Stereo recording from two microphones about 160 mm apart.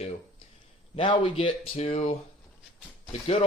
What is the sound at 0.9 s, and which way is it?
Speech, 30° left (ahead or behind).